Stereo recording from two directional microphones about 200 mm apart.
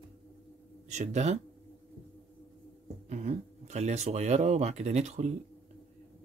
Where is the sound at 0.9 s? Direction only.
35° right (ahead or behind).